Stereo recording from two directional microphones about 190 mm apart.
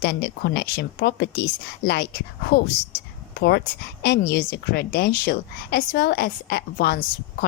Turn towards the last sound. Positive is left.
turn(degrees=50)  # may be behind; listen again after turning